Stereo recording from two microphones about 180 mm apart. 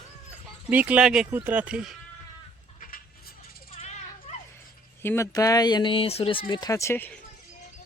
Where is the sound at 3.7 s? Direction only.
40° left (ahead or behind).